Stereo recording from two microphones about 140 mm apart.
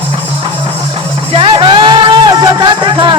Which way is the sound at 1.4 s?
40° right (ahead or behind).